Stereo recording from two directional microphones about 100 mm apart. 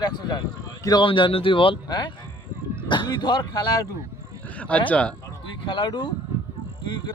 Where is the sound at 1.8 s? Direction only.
45° left (ahead or behind).